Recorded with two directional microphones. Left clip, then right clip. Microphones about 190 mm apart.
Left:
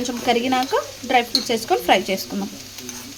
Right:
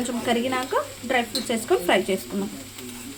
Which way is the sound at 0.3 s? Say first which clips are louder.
Left 6 dB; 30° left (ahead or behind).